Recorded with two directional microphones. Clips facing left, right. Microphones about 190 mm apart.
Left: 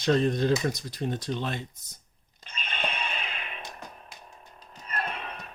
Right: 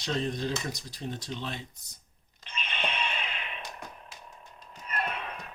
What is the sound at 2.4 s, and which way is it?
Music, 45° left (ahead or behind).